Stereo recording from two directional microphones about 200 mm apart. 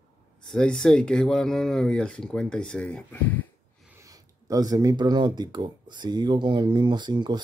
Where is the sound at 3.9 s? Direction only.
15° right (ahead or behind).